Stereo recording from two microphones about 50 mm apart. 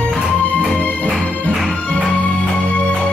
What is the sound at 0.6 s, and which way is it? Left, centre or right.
Music, left.